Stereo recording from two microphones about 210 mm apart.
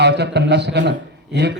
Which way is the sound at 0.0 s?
55° right (ahead or behind).